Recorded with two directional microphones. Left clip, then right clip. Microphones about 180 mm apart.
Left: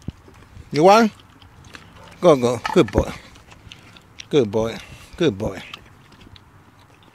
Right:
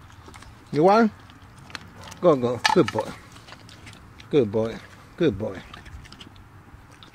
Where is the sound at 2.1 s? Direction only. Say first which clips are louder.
Left 5 dB; 30° left (ahead or behind).